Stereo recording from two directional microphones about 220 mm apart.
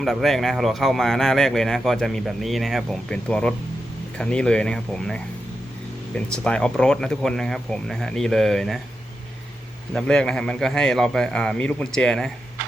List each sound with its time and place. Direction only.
0.0 s speech: centre (ahead or behind)
9.9 s speech: 5° left (ahead or behind)